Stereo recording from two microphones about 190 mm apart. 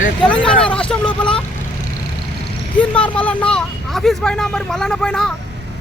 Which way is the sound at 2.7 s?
5° left (ahead or behind).